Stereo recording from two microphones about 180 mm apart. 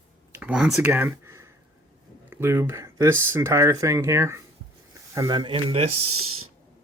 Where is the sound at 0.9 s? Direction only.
15° right (ahead or behind).